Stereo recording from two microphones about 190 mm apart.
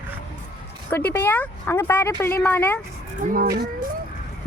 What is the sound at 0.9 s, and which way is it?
A woman's voice, 10° left (ahead or behind).